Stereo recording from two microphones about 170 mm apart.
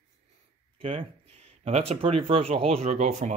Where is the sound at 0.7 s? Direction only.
35° right (ahead or behind).